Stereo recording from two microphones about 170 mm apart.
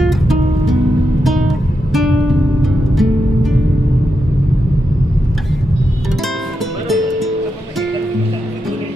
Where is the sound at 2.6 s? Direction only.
Centre (ahead or behind).